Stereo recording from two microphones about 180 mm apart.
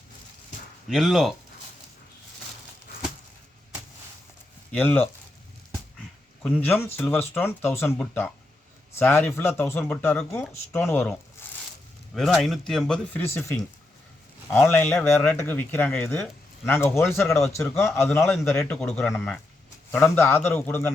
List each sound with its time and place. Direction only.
0.9 s speech: centre (ahead or behind)
4.7 s speech: 10° left (ahead or behind)
6.4 s speech: 10° left (ahead or behind)
12.1 s speech: centre (ahead or behind)
18.2 s speech: 5° left (ahead or behind)